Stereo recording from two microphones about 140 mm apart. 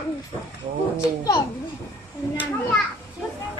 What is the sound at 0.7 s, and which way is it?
Speech, 45° right (ahead or behind).